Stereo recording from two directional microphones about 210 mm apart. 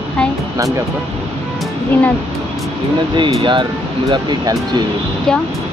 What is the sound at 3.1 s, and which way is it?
Speech, 20° right (ahead or behind).